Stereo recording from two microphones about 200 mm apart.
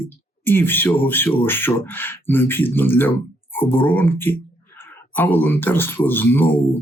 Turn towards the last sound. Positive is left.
turn(degrees=10)  # may be behind; listen again after turning